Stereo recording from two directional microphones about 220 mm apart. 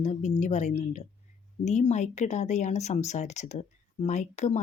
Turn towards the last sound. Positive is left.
turn(degrees=30)  # may be behind; listen again after turning